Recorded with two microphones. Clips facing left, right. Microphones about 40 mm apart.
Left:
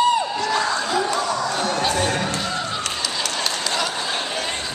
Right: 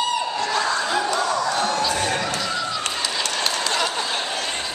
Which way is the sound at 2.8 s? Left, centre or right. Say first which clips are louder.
Even; centre.